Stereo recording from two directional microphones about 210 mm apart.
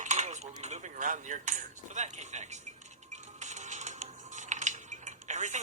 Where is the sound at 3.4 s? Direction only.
35° right (ahead or behind).